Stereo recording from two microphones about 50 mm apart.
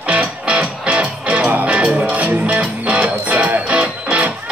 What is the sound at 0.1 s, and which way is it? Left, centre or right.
Music, centre.